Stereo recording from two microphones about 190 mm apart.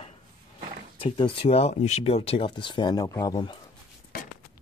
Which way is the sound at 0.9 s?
25° left (ahead or behind).